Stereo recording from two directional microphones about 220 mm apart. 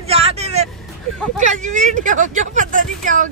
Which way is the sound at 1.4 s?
35° right (ahead or behind).